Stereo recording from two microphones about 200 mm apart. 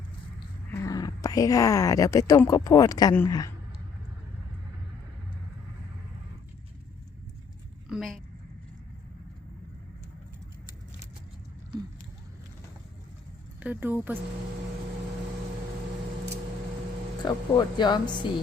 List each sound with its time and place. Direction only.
0.7 s speech: 15° left (ahead or behind)
7.9 s a sound: centre (ahead or behind)
13.6 s speech: 10° right (ahead or behind)
17.2 s speech: 20° left (ahead or behind)